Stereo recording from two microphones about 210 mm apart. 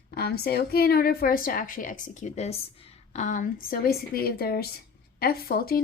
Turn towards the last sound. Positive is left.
turn(degrees=45)  # may be behind; listen again after turning